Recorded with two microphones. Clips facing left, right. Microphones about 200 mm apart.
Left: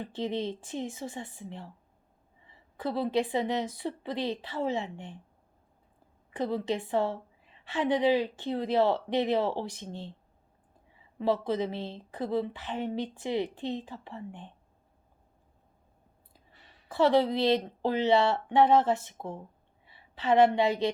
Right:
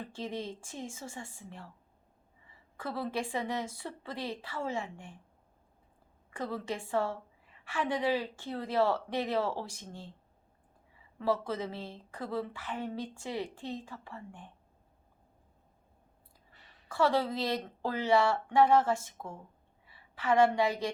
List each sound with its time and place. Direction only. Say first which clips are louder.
0.0 s a woman's voice: left 6 dB; 20° left (ahead or behind)
6.3 s a woman's voice: left 6 dB; 20° left (ahead or behind)
11.2 s a woman's voice: left 4 dB; 20° left (ahead or behind)
16.9 s a woman's voice: left 5 dB; 20° left (ahead or behind)